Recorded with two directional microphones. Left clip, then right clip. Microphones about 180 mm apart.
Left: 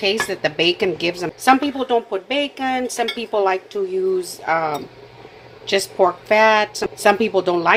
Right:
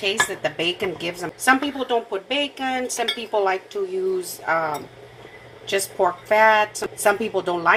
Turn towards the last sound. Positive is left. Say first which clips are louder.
# left 3 dB
turn(degrees=35)  # may be behind; listen again after turning